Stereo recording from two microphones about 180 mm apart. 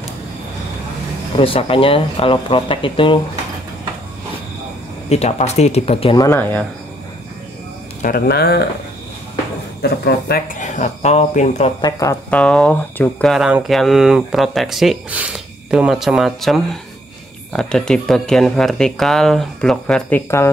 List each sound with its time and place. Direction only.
1.4 s speech: 30° left (ahead or behind)
5.1 s speech: 35° left (ahead or behind)
6.1 s speech: 15° left (ahead or behind)
8.0 s speech: 55° left (ahead or behind)
9.8 s speech: 65° left (ahead or behind); by 11.7 s 40° left (ahead or behind)
11.8 s speech: 20° left (ahead or behind)
12.3 s speech: 5° left (ahead or behind)